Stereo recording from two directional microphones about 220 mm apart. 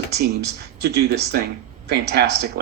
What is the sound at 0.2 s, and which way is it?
Speech, 45° right (ahead or behind).